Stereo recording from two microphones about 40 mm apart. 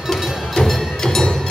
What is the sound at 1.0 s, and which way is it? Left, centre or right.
Music, centre.